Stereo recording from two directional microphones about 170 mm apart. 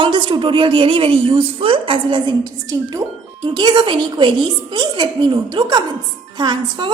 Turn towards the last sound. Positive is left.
turn(degrees=-25)  # may be behind; listen again after turning